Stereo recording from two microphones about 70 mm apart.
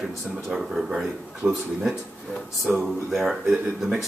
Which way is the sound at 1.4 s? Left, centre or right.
Centre.